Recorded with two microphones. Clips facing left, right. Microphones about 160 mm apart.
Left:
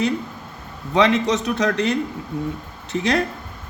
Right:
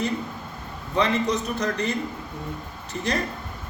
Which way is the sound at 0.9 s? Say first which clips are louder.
Left 5 dB; 80° left.